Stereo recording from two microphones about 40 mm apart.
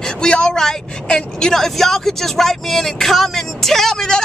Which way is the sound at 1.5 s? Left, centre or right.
Centre.